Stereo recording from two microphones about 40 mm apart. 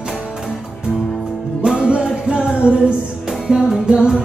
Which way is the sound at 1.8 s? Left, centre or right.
Right.